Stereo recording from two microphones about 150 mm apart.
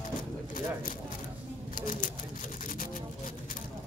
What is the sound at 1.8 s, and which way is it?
Speech, 60° left (ahead or behind).